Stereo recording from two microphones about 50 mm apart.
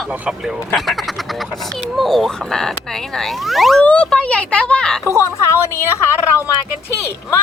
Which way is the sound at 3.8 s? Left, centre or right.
Left.